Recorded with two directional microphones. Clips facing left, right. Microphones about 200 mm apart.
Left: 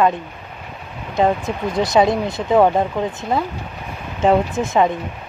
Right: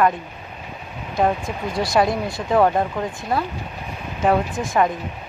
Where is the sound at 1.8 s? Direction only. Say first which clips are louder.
Left 4 dB; 20° left (ahead or behind).